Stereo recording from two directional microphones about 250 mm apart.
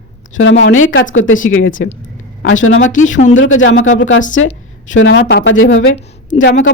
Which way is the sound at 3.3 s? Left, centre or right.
Left.